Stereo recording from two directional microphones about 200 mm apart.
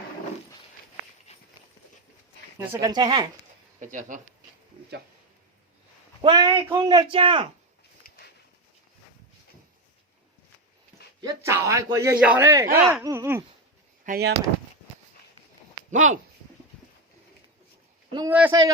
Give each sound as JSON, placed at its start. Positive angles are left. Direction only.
{"t": 1.3, "sound": "walk", "side_deg": 35}
{"t": 2.6, "sound": "speech", "side_deg": -20}
{"t": 3.8, "sound": "speech", "side_deg": -40}
{"t": 6.2, "sound": "speech", "side_deg": -25}
{"t": 8.0, "sound": "a sound", "side_deg": 50}
{"t": 11.2, "sound": "a man's voice", "side_deg": -15}
{"t": 14.0, "sound": "speech", "side_deg": -50}
{"t": 15.9, "sound": "speech", "side_deg": -40}
{"t": 18.3, "sound": "a man's voice", "side_deg": -10}